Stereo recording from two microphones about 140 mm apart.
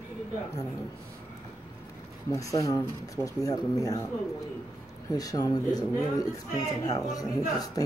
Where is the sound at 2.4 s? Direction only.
25° left (ahead or behind).